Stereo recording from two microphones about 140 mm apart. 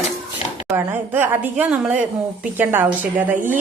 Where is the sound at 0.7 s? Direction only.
15° right (ahead or behind).